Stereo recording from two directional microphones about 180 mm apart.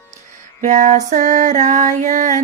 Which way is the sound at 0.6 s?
45° right (ahead or behind).